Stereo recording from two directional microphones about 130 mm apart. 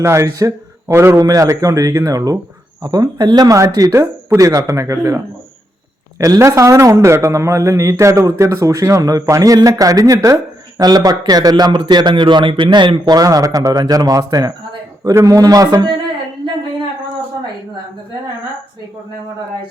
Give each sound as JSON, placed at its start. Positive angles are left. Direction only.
{"t": 0.0, "sound": "a man's voice", "side_deg": -20}